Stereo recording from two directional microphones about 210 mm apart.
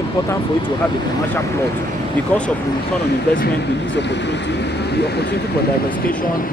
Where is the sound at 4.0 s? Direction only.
55° left (ahead or behind).